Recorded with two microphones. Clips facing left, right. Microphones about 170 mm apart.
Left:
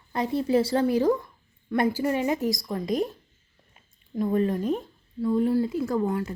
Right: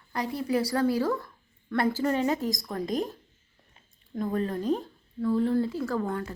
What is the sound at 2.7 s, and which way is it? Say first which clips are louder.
Speech: left 3 dB; 45° right (ahead or behind).